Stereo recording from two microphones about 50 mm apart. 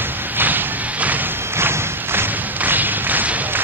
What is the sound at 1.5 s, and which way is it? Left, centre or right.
Thump, right.